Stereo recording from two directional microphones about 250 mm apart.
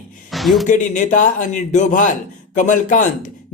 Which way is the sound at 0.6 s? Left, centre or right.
Left.